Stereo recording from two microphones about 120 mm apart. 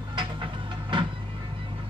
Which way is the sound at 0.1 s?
45° right (ahead or behind).